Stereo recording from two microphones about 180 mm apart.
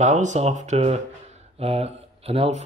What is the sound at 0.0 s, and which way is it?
Speech, 40° right (ahead or behind).